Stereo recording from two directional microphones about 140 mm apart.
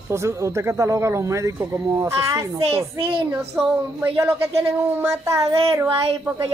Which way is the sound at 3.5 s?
10° right (ahead or behind).